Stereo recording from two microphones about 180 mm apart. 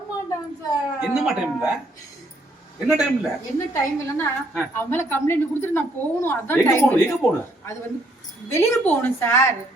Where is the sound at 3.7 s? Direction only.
15° left (ahead or behind).